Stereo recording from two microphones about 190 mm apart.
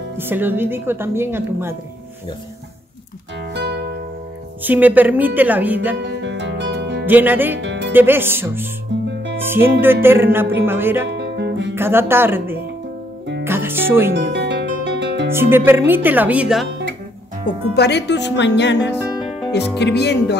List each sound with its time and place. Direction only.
0.2 s a woman's voice: 10° right (ahead or behind)
3.5 s music: 60° right (ahead or behind)
4.6 s a woman's voice: 10° right (ahead or behind)
6.0 s music: 65° right (ahead or behind)
7.1 s a woman's voice: 10° right (ahead or behind)
7.5 s music: 65° right (ahead or behind)
7.9 s a woman's voice: 10° right (ahead or behind)
11.1 s guitar: 65° right (ahead or behind)
11.7 s a woman's voice: 10° right (ahead or behind)
13.4 s music: 10° right (ahead or behind)
14.1 s music: 65° right (ahead or behind)
15.3 s a woman's voice: 10° right (ahead or behind)
17.5 s speech: 60° left (ahead or behind)